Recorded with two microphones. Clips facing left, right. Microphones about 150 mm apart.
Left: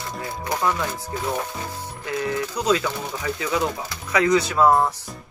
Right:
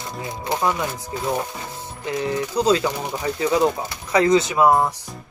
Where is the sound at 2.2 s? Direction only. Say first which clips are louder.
Right 4 dB; 30° right (ahead or behind); by 4.9 s 10° right (ahead or behind).